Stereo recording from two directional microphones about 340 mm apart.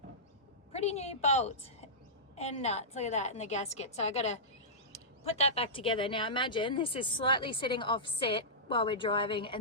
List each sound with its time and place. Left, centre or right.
0.7 s a woman's voice: centre